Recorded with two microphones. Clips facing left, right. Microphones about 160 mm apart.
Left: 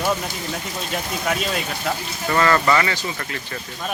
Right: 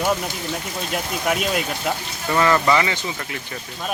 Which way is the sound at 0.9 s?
5° right (ahead or behind).